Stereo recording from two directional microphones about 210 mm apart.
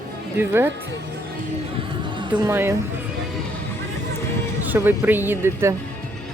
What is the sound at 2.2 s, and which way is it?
Speech, 20° right (ahead or behind).